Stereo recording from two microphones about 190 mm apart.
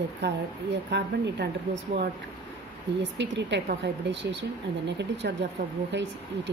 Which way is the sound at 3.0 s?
65° right (ahead or behind).